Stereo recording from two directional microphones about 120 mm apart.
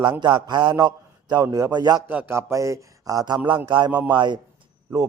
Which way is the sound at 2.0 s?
15° right (ahead or behind).